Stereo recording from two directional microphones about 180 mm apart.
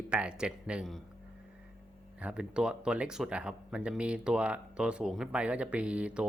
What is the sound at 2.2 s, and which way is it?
Speech, 5° right (ahead or behind).